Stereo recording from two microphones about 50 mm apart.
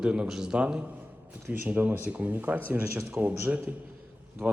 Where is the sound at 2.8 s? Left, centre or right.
Right.